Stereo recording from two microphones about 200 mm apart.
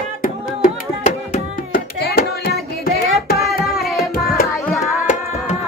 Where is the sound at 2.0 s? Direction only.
50° left (ahead or behind).